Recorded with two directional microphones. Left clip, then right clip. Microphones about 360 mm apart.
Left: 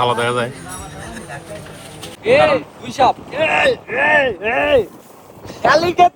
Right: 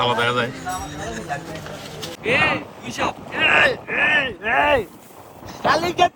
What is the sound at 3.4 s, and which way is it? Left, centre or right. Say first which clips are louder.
Speech: right 3 dB; right.